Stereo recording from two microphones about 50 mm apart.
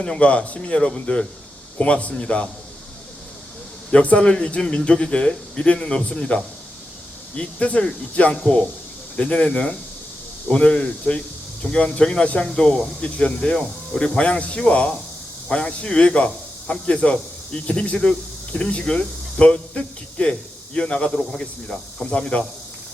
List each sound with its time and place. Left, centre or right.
0.0 s speech: left
3.9 s speech: left